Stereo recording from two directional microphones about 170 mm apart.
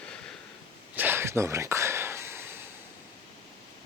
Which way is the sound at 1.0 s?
15° right (ahead or behind).